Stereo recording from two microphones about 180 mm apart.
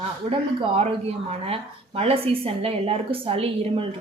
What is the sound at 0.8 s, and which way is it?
A woman's voice, 35° right (ahead or behind).